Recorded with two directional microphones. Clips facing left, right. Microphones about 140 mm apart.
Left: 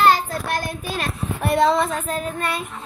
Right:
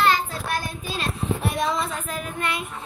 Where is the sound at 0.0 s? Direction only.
45° left (ahead or behind).